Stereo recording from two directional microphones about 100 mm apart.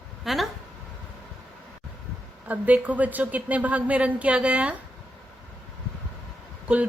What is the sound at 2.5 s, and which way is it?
A woman's voice, 15° right (ahead or behind).